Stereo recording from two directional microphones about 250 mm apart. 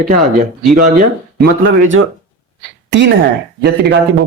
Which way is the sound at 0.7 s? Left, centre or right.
Right.